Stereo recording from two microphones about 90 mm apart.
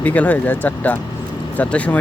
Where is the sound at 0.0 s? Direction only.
15° left (ahead or behind).